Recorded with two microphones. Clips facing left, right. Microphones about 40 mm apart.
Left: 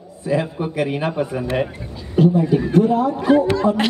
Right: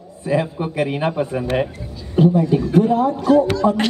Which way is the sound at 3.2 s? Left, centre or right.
Left.